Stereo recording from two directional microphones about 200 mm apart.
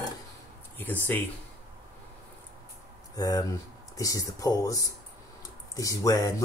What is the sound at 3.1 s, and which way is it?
Speech, 15° left (ahead or behind).